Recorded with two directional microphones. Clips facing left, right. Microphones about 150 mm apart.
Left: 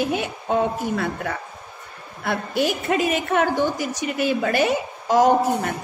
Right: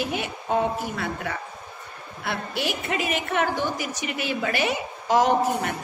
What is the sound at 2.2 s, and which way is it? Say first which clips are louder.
A woman's voice: left 6 dB; 50° left (ahead or behind).